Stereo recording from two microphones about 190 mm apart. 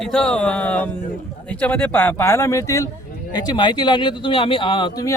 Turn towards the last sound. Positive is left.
turn(degrees=20)  # may be behind; listen again after turning